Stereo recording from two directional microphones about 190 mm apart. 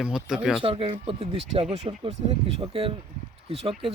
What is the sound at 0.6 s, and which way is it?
Speech, 30° right (ahead or behind).